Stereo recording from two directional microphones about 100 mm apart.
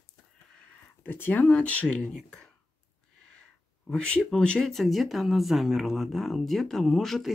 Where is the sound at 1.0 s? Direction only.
20° left (ahead or behind).